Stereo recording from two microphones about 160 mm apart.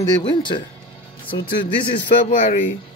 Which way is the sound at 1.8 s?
60° left (ahead or behind).